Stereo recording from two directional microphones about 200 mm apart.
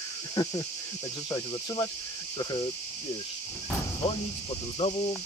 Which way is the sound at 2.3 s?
20° left (ahead or behind).